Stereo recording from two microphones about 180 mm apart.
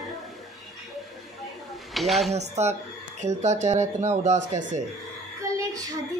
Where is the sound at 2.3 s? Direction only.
40° right (ahead or behind).